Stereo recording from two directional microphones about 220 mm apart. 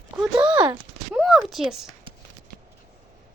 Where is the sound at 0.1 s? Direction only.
10° right (ahead or behind).